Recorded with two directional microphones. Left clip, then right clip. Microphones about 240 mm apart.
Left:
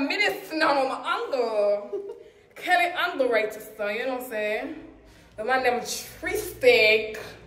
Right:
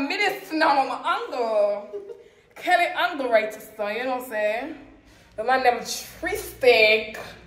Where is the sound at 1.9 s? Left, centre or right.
Left.